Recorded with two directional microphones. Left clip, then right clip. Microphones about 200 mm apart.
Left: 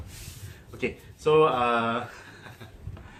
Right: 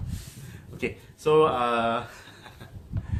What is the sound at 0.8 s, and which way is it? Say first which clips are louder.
Speech: even; 40° right (ahead or behind).